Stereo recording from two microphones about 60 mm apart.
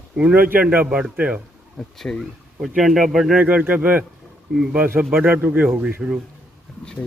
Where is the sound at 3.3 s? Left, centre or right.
Right.